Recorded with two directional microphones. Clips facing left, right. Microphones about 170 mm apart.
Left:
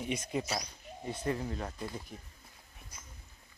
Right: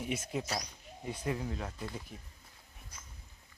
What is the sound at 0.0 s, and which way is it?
Speech, 5° right (ahead or behind).